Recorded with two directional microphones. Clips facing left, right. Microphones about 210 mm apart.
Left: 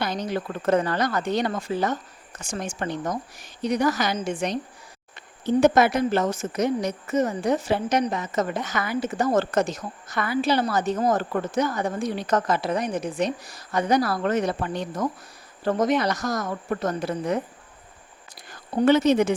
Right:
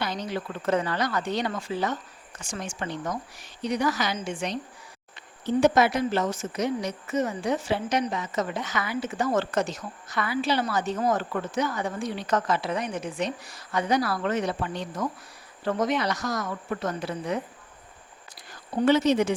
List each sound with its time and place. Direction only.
0.0 s a woman's voice: 45° left (ahead or behind)
5.5 s a woman's voice: 50° left (ahead or behind)
18.9 s a woman's voice: 50° left (ahead or behind)